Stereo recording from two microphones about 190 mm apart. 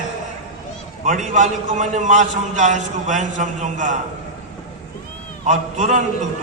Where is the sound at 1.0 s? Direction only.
40° right (ahead or behind).